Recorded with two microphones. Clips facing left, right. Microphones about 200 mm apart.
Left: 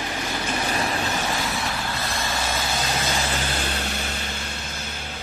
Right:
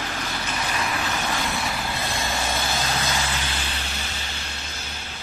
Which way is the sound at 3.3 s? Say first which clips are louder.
Left 4 dB; 45° left (ahead or behind).